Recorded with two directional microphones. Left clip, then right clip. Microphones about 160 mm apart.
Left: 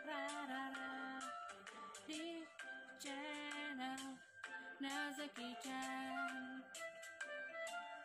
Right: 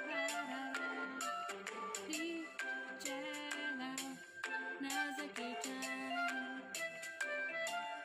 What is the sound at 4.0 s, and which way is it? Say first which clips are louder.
Music: right 7 dB; 35° right (ahead or behind).